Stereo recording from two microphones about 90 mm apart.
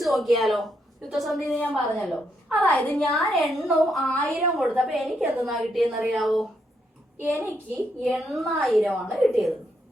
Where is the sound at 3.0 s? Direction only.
Centre (ahead or behind).